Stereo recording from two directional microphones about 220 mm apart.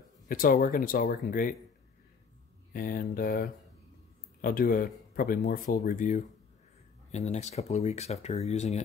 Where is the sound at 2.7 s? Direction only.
40° left (ahead or behind).